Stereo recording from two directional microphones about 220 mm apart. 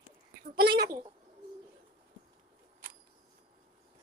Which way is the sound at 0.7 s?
15° right (ahead or behind).